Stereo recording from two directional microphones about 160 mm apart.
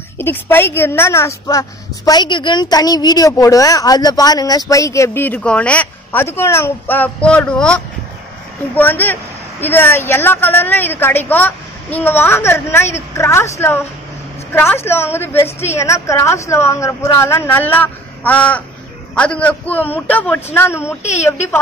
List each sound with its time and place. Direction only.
0.2 s a woman's voice: 15° left (ahead or behind)